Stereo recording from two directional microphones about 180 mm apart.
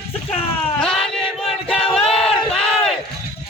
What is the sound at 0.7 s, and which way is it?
Chant, 5° left (ahead or behind).